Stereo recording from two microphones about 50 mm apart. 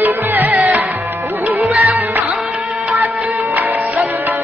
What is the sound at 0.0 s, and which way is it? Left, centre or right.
Music, right.